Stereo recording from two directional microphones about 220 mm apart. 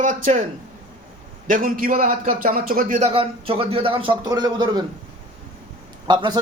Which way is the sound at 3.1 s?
25° right (ahead or behind).